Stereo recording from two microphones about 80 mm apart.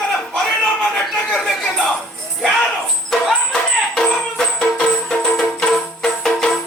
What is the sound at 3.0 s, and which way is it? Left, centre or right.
Music, centre.